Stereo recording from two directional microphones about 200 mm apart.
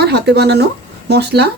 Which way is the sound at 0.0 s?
55° right (ahead or behind).